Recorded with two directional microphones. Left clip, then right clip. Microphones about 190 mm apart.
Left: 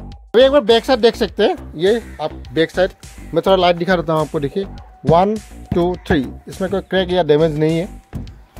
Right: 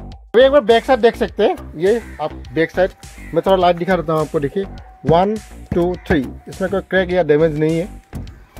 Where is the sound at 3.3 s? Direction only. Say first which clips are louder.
Even; 15° left (ahead or behind).